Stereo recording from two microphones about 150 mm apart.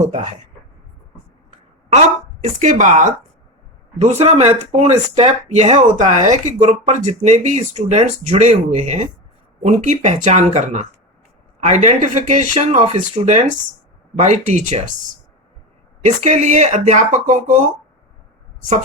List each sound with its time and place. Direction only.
0.0 s speech: 55° right (ahead or behind)
2.4 s speech: 55° right (ahead or behind)
16.0 s speech: 50° right (ahead or behind)